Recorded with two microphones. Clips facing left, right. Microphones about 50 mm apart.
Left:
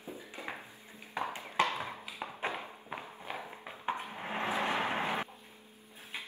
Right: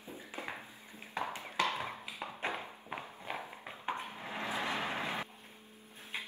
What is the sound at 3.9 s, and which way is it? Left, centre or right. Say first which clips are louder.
Dishes: left 3 dB; left.